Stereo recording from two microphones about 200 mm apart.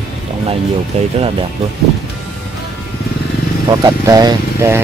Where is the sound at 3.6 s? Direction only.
20° right (ahead or behind).